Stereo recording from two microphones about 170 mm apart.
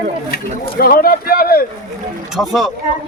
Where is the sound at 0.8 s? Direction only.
60° left (ahead or behind).